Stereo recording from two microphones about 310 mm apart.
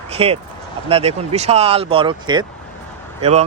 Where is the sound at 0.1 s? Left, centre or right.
Centre.